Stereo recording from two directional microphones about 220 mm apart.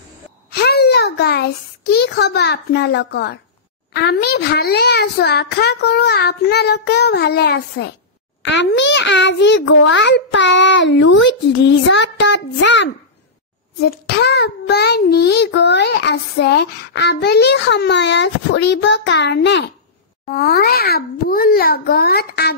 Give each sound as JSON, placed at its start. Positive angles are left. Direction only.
{"t": 0.5, "sound": "a child's voice", "side_deg": 45}